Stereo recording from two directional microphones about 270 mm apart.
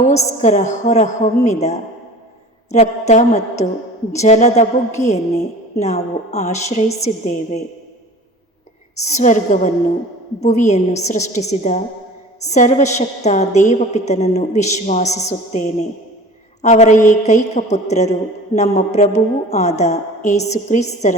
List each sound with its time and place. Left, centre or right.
0.0 s a woman's voice: left
9.0 s a woman's voice: left